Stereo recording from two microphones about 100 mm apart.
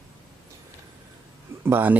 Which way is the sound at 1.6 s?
20° right (ahead or behind).